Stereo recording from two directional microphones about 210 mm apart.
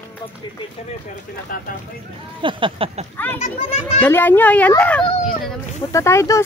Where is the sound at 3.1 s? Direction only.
10° left (ahead or behind).